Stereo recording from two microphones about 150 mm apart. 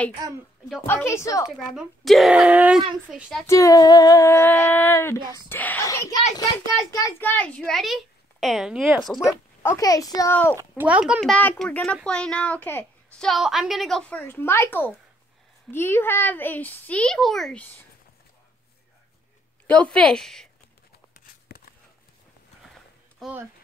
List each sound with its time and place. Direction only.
0.8 s speech: 15° left (ahead or behind)
1.8 s a child's voice: centre (ahead or behind)
3.4 s speech: 20° left (ahead or behind)
7.2 s a child's voice: 10° left (ahead or behind)
9.3 s speech: 20° left (ahead or behind)
10.8 s a child's voice: 10° right (ahead or behind)
11.1 s speech: 5° left (ahead or behind)
13.2 s a child's voice: centre (ahead or behind)
19.6 s speech: 10° left (ahead or behind)
21.3 s a sound: 80° left
23.2 s speech: centre (ahead or behind)